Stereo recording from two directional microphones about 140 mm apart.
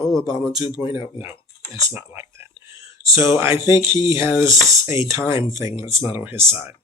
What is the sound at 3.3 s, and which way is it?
Speech, 15° right (ahead or behind).